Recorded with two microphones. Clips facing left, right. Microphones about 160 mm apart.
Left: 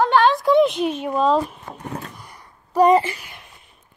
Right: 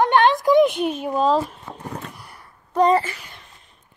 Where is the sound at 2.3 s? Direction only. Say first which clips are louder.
Left 1 dB; 10° left (ahead or behind).